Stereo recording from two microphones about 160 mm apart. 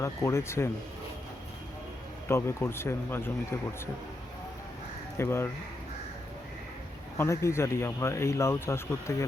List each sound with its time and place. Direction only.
0.0 s speech: 15° left (ahead or behind)
2.2 s speech: 15° left (ahead or behind)
5.1 s speech: 15° left (ahead or behind)
7.2 s speech: 15° left (ahead or behind)